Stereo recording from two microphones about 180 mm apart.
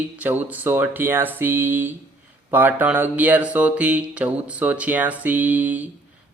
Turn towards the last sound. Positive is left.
turn(degrees=-10)  # may be behind; listen again after turning